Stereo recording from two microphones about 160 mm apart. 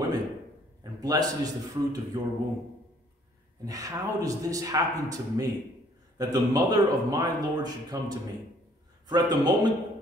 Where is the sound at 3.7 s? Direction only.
20° right (ahead or behind).